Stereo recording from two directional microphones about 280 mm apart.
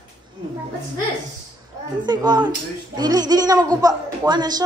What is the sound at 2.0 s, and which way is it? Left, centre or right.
A woman's voice, centre.